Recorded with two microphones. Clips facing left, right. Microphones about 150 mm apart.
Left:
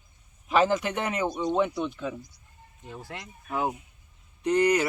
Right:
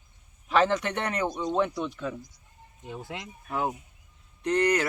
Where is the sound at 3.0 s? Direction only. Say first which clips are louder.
Right 2 dB; 20° right (ahead or behind).